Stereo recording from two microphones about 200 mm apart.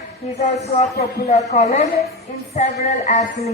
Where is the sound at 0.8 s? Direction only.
35° left (ahead or behind).